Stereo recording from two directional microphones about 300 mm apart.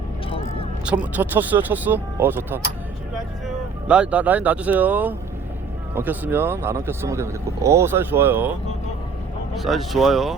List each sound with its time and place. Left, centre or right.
1.1 s speech: centre
9.6 s speech: centre